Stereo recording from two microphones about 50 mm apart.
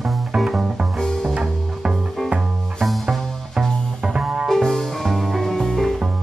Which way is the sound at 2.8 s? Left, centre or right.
Centre.